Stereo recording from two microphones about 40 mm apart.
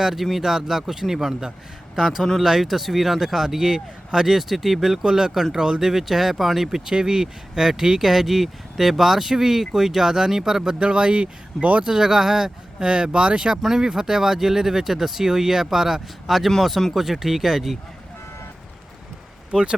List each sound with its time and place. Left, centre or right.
0.0 s speech: centre; by 11.9 s right
11.9 s speech: centre
13.6 s speech: centre
19.5 s speech: right